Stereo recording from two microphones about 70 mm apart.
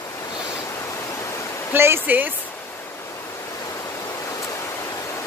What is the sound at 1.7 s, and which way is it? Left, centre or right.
Speech, right.